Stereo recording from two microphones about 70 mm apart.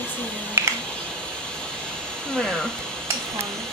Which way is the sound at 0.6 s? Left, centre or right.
Right.